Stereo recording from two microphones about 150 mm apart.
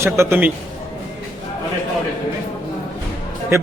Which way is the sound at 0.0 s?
15° right (ahead or behind).